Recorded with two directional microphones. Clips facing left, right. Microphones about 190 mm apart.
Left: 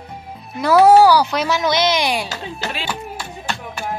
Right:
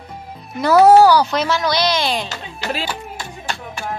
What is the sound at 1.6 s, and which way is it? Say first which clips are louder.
Speech: left 1 dB; 20° left (ahead or behind).